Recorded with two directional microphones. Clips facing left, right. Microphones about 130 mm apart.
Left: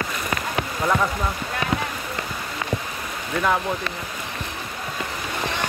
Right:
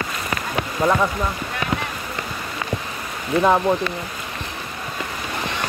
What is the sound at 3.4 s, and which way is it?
Speech, 30° right (ahead or behind).